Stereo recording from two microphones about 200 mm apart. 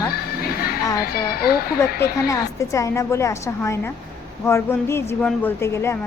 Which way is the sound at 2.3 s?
15° left (ahead or behind).